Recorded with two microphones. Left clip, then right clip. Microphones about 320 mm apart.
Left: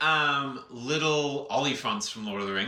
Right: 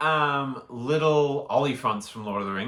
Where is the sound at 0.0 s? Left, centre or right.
Centre.